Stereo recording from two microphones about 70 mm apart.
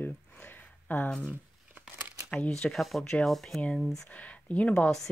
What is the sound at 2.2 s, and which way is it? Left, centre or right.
Speech, centre.